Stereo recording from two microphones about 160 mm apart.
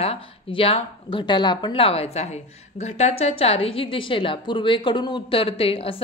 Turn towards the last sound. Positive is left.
turn(degrees=35)  # may be behind; listen again after turning